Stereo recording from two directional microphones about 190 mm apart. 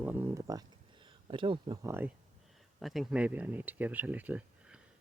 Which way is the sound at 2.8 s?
Centre (ahead or behind).